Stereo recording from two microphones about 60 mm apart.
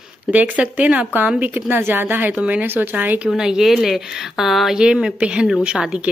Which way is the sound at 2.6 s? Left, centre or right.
Right.